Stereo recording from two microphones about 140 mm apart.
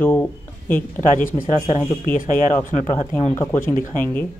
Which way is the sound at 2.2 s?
65° left (ahead or behind).